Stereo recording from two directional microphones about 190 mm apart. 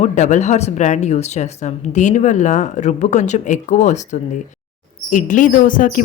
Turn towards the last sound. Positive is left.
turn(degrees=45)  # may be behind; listen again after turning